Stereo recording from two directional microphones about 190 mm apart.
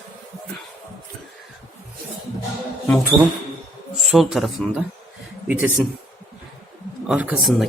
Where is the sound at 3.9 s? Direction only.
Centre (ahead or behind).